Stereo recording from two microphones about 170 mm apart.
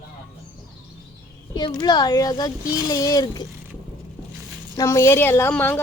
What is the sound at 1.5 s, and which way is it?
A child's voice, 25° left (ahead or behind).